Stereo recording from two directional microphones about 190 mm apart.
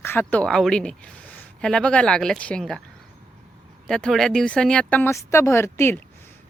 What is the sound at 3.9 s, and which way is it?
Speech, 5° left (ahead or behind).